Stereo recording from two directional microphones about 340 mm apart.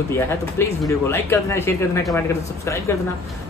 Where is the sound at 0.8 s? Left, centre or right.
Centre.